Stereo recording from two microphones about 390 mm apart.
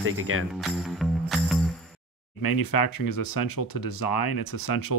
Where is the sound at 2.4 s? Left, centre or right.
Left.